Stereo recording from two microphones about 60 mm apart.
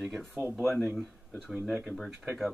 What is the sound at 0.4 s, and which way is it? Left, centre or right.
Speech, right.